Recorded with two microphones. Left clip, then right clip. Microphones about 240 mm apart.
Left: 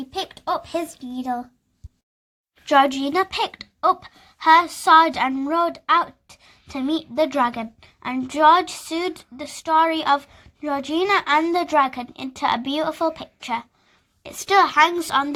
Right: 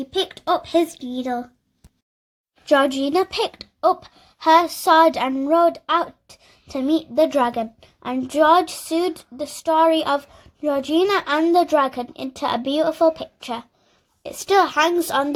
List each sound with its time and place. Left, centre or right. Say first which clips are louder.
0.1 s a child's voice: right 4 dB; centre
2.8 s a woman's voice: right 1 dB; left
9.4 s speech: right 6 dB; left
9.6 s a woman's voice: right 1 dB; centre